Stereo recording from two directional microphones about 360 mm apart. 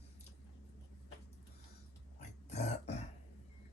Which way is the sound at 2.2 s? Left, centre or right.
Centre.